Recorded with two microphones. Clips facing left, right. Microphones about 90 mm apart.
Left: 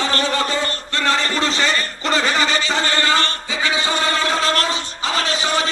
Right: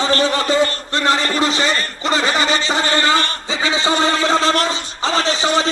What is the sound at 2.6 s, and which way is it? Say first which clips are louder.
A man's voice: right 2 dB; 20° right (ahead or behind).